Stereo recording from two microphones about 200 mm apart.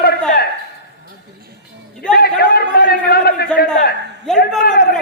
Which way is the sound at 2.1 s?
50° left (ahead or behind).